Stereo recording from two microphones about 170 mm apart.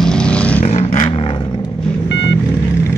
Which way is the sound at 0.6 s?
40° left (ahead or behind).